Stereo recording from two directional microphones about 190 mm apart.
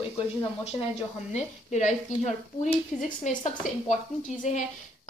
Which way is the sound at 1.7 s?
35° left (ahead or behind).